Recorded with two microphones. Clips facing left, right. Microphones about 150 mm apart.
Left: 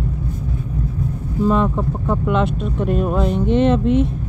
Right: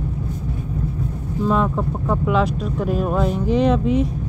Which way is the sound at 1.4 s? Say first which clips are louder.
Left 2 dB; centre (ahead or behind).